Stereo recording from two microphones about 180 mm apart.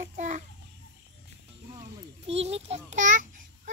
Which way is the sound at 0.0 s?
45° right (ahead or behind).